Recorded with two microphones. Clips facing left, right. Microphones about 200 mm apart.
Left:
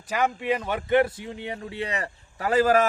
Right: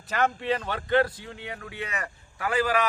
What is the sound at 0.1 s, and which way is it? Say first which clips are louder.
Speech: left 1 dB; 10° left (ahead or behind).